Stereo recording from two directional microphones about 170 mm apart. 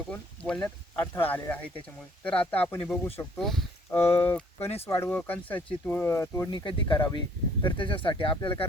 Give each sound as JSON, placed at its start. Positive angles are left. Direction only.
{"t": 0.1, "sound": "a sound", "side_deg": 5}
{"t": 1.0, "sound": "speech", "side_deg": 15}
{"t": 3.4, "sound": "speech", "side_deg": 0}
{"t": 3.9, "sound": "speech", "side_deg": 15}
{"t": 6.5, "sound": "speech", "side_deg": 30}